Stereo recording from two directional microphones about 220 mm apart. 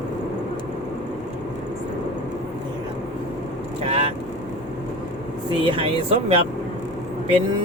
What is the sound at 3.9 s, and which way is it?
Speech, 25° right (ahead or behind).